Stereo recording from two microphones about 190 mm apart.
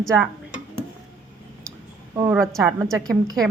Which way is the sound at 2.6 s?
15° right (ahead or behind).